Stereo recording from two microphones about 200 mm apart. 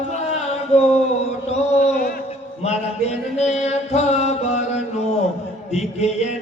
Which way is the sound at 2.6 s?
35° left (ahead or behind).